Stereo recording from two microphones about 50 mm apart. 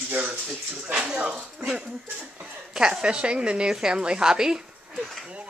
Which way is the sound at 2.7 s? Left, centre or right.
Centre.